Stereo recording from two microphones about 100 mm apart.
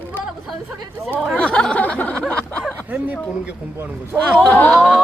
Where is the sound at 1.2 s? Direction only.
10° left (ahead or behind).